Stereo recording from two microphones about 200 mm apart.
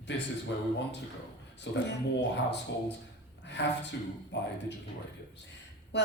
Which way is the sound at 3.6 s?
60° left (ahead or behind).